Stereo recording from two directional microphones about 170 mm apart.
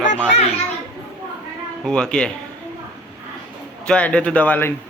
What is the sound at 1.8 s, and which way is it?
Speech, 5° left (ahead or behind).